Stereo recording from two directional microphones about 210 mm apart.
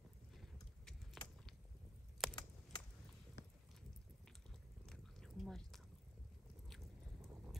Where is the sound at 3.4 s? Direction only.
55° left (ahead or behind).